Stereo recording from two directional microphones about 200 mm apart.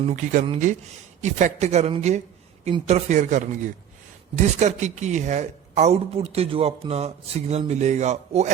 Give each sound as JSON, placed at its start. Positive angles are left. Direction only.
{"t": 0.0, "sound": "speech", "side_deg": -35}